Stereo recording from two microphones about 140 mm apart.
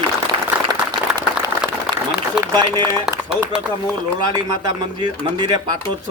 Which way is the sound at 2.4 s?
30° right (ahead or behind).